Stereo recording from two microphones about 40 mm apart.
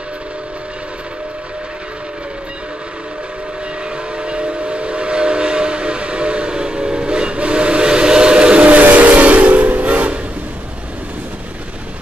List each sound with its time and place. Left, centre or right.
4.2 s train: right